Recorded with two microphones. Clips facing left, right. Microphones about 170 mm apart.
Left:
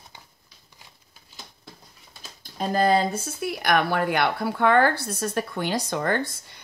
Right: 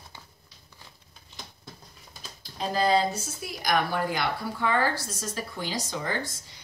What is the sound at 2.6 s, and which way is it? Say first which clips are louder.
Speech: left 3 dB; 50° left (ahead or behind).